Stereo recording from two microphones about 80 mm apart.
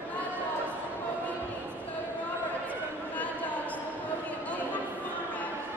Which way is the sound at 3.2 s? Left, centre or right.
Centre.